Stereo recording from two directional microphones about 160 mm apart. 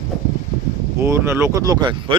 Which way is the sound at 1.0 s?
15° right (ahead or behind).